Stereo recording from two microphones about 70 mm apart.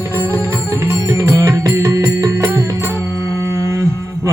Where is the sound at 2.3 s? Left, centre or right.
Right.